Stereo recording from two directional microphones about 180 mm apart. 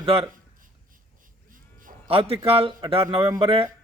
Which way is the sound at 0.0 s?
30° right (ahead or behind).